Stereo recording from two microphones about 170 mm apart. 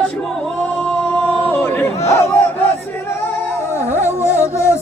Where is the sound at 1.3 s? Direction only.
10° left (ahead or behind).